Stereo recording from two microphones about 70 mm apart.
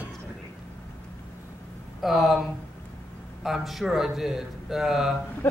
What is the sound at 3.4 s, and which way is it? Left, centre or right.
Speech, centre.